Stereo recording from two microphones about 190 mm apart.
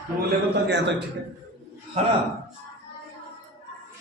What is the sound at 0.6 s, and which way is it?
Speech, 65° right (ahead or behind).